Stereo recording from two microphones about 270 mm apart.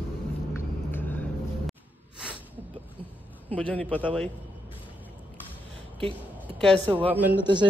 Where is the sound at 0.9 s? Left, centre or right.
Centre.